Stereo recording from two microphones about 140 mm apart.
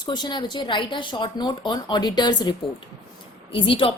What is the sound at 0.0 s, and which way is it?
A woman's voice, 30° left (ahead or behind).